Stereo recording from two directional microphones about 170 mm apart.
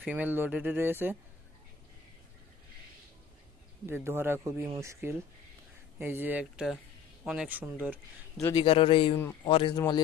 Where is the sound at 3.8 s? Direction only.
15° right (ahead or behind).